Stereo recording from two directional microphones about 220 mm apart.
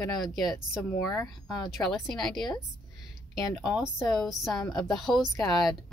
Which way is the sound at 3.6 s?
5° right (ahead or behind).